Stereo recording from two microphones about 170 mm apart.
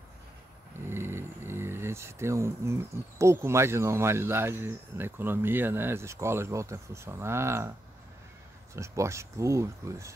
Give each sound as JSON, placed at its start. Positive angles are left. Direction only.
{"t": 0.8, "sound": "speech", "side_deg": -15}
{"t": 8.7, "sound": "speech", "side_deg": -15}